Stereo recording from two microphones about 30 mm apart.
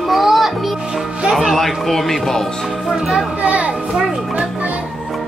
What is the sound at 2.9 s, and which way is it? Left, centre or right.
Speech, centre.